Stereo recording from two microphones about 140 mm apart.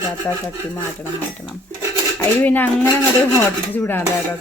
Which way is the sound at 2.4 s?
10° left (ahead or behind).